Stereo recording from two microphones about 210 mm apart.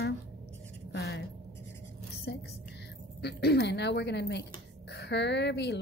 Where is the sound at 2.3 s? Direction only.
55° left (ahead or behind).